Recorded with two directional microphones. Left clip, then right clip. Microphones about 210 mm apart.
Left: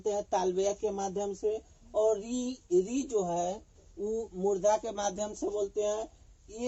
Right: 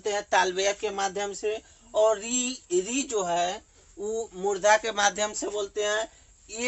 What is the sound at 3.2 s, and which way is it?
Speech, 45° right (ahead or behind).